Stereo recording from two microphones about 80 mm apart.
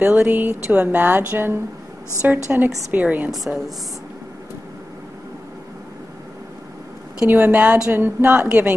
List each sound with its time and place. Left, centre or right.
0.0 s speech: right
3.3 s a woman's voice: centre
7.2 s speech: right